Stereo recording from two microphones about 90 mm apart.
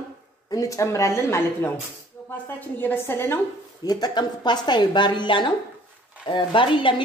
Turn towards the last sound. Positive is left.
turn(degrees=70)  # may be behind; listen again after turning